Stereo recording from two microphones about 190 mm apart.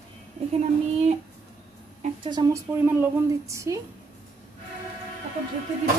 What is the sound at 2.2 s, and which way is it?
A woman's voice, 20° right (ahead or behind).